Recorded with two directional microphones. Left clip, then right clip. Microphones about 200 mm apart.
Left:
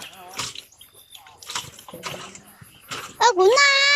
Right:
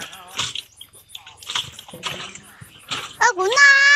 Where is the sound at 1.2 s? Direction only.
Centre (ahead or behind).